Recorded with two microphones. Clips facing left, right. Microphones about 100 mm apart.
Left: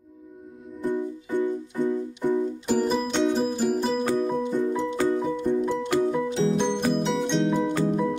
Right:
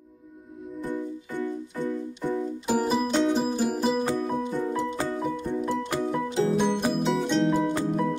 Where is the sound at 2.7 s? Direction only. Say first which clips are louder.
Even; 5° right (ahead or behind).